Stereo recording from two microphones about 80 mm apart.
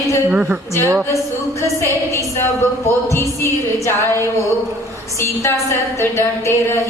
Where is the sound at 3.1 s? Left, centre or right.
Left.